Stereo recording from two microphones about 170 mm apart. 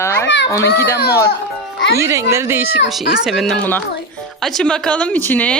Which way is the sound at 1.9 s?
15° right (ahead or behind).